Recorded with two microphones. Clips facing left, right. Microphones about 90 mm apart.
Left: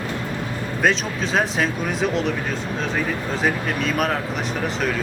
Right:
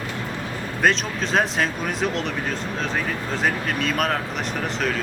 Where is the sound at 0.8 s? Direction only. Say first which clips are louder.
Even; centre (ahead or behind).